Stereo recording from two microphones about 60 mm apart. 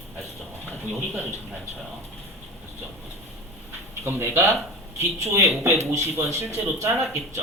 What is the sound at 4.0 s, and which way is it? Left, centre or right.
Speech, right.